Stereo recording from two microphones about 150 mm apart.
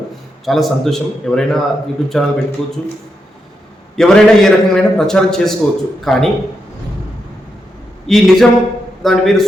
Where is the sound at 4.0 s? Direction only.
5° left (ahead or behind).